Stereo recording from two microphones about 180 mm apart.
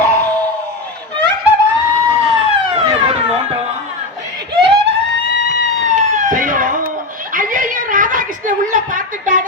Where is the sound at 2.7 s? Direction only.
35° right (ahead or behind).